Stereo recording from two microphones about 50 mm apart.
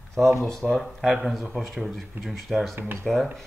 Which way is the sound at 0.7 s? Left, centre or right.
Centre.